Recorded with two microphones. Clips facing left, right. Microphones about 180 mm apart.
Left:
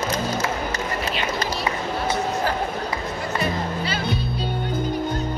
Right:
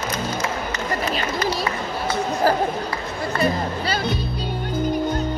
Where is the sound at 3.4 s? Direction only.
40° right (ahead or behind).